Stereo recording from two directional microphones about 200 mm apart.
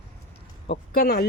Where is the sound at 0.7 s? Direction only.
55° left (ahead or behind).